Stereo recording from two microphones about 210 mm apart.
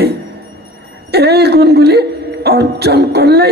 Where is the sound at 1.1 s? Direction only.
50° right (ahead or behind).